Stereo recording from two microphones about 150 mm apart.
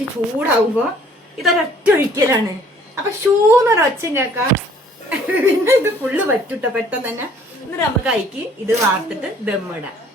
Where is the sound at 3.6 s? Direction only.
20° right (ahead or behind).